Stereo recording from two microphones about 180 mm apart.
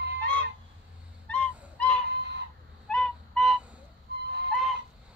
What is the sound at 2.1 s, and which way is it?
Fowl, 65° right (ahead or behind).